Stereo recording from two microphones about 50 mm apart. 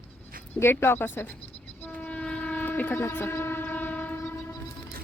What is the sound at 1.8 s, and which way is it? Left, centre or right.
Train, left.